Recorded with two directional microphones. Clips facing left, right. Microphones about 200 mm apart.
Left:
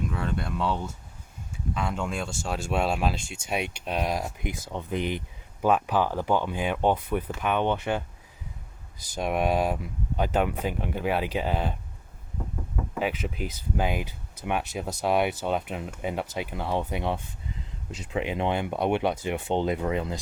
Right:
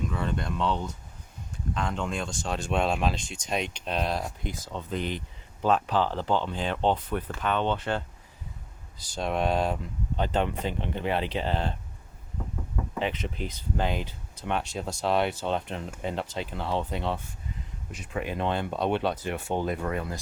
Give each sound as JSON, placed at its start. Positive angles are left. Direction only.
{"t": 0.1, "sound": "speech", "side_deg": 5}
{"t": 9.1, "sound": "speech", "side_deg": 10}
{"t": 12.9, "sound": "speech", "side_deg": 5}